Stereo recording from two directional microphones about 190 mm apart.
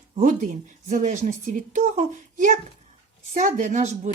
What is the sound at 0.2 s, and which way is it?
A woman's voice, 45° right (ahead or behind).